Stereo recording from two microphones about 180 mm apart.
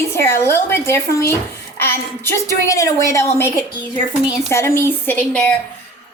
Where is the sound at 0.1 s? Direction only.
15° left (ahead or behind).